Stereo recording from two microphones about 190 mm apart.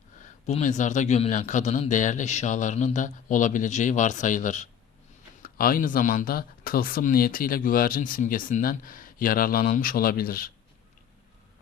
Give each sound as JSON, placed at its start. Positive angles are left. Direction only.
{"t": 0.2, "sound": "a man's voice", "side_deg": 40}